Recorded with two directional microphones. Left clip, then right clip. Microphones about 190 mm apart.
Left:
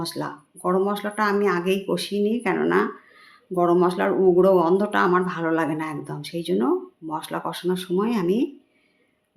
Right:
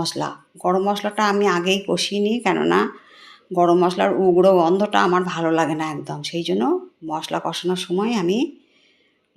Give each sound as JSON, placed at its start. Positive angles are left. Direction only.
{"t": 0.0, "sound": "speech", "side_deg": -5}